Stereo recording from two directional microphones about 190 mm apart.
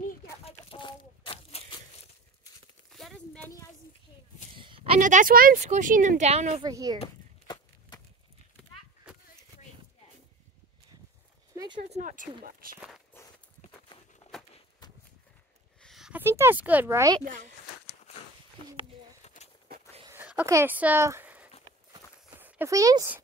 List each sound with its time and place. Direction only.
0.5 s chicken: 30° left (ahead or behind)
2.9 s a sound: centre (ahead or behind)
4.6 s a sound: 25° right (ahead or behind)
5.0 s speech: 45° right (ahead or behind)
6.6 s speech: 20° right (ahead or behind)
7.0 s walk: 25° left (ahead or behind)
11.5 s a sound: 20° right (ahead or behind)
11.8 s speech: 40° right (ahead or behind)
13.1 s walk: 10° left (ahead or behind)
15.8 s speech: centre (ahead or behind)
17.2 s speech: 40° right (ahead or behind)
19.2 s walk: 35° left (ahead or behind)
20.1 s a sound: 10° right (ahead or behind)